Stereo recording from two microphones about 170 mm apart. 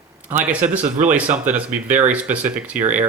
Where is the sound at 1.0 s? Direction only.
10° right (ahead or behind).